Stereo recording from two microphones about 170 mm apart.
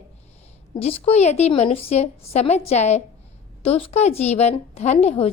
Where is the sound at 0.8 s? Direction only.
35° left (ahead or behind).